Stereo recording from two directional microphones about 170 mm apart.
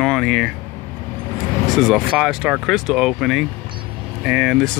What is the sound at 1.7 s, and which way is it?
Speech, centre (ahead or behind).